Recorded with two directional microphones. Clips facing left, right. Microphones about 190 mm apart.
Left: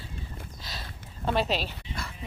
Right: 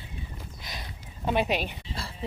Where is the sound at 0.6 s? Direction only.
15° right (ahead or behind).